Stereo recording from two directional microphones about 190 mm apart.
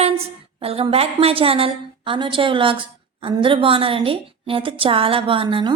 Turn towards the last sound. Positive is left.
turn(degrees=-25)  # may be behind; listen again after turning